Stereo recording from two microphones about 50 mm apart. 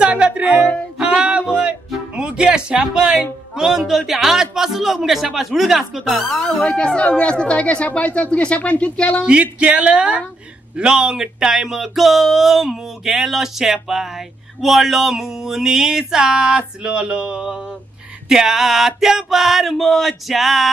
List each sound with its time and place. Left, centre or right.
0.0 s music: right
2.1 s speech: centre
6.3 s speech: centre
6.6 s speech: left
9.2 s speech: right
18.3 s a sound: centre